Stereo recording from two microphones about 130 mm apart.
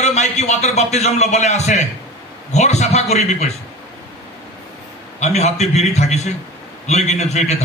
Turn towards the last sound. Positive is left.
turn(degrees=60)  # may be behind; listen again after turning